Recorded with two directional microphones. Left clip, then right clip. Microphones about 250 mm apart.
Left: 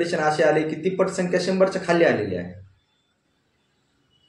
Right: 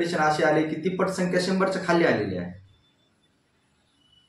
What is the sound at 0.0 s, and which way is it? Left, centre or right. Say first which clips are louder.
A man's voice: left 2 dB; centre.